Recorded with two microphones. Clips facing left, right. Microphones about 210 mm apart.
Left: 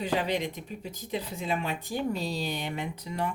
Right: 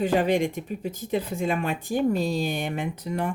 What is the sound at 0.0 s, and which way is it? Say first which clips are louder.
Speech: right 7 dB; 50° right (ahead or behind).